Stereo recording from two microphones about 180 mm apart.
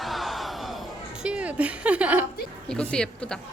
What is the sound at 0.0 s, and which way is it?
Crowd, centre (ahead or behind).